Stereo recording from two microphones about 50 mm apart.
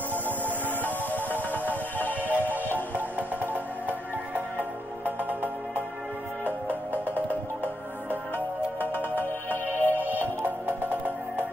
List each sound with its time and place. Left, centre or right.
1.7 s music: left
2.5 s music: right
8.7 s music: left
9.7 s music: right